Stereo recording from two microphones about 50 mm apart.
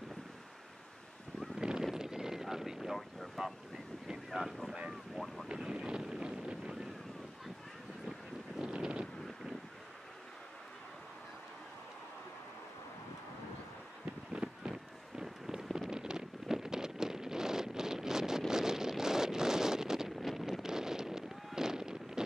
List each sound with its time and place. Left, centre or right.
1.6 s a sound: centre
1.9 s vehicle: centre
5.1 s boat: centre
5.5 s wind noise: centre
8.5 s a sound: centre
14.3 s run: centre
15.2 s wind noise: centre